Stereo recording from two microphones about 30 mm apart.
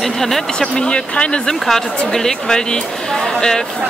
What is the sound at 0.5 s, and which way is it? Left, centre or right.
Speech, left.